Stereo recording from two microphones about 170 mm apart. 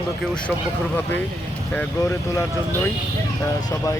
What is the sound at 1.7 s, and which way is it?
Speech, 15° left (ahead or behind).